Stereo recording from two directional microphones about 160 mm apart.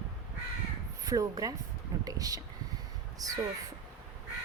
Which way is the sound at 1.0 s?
20° right (ahead or behind).